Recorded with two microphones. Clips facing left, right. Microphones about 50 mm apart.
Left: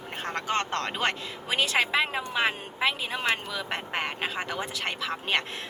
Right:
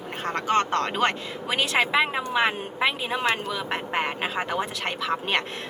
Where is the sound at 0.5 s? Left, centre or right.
Right.